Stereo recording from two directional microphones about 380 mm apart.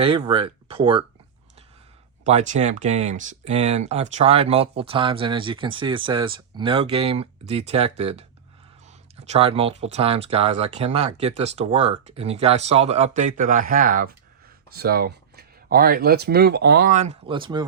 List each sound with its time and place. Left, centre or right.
0.0 s speech: centre
2.2 s speech: centre